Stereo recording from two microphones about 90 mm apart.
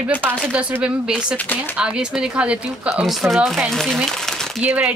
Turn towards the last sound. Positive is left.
turn(degrees=-15)  # may be behind; listen again after turning